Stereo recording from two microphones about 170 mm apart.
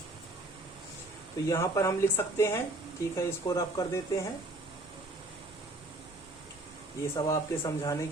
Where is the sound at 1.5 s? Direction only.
15° left (ahead or behind).